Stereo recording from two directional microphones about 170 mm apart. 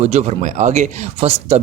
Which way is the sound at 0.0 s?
40° right (ahead or behind).